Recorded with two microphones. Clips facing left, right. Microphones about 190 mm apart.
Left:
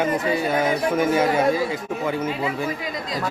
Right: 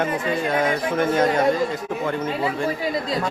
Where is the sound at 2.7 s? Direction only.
30° right (ahead or behind).